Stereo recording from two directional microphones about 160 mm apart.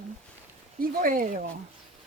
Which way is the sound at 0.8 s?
60° right (ahead or behind).